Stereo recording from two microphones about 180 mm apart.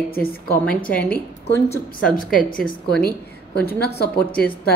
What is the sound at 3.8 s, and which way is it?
Speech, 60° left (ahead or behind).